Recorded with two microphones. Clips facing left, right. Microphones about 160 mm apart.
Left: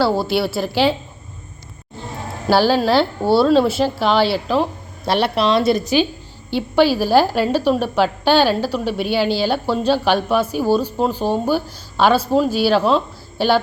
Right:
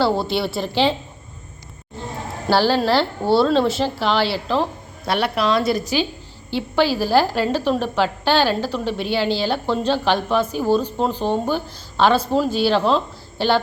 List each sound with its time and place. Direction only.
0.0 s speech: 5° left (ahead or behind)
2.5 s speech: 10° left (ahead or behind)
5.0 s a woman's voice: 30° left (ahead or behind); by 13.5 s 10° left (ahead or behind)